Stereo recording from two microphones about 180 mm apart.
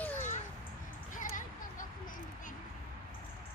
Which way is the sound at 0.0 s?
10° left (ahead or behind).